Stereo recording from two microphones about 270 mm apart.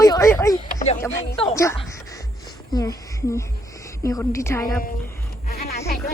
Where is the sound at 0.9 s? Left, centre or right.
Centre.